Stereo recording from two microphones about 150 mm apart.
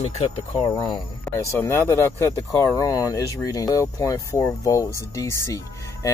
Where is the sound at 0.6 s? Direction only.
25° left (ahead or behind).